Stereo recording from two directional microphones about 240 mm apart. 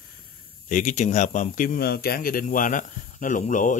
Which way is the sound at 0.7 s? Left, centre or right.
Left.